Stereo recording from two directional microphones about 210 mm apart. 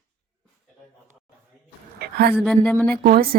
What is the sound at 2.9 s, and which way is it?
Speech, 45° right (ahead or behind).